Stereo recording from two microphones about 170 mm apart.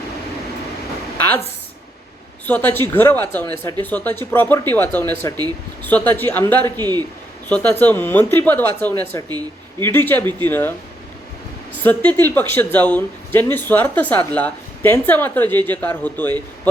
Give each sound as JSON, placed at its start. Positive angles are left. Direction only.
{"t": 2.5, "sound": "speech", "side_deg": 10}
{"t": 6.7, "sound": "a man's voice", "side_deg": -25}
{"t": 7.4, "sound": "speech", "side_deg": 10}
{"t": 11.8, "sound": "speech", "side_deg": 10}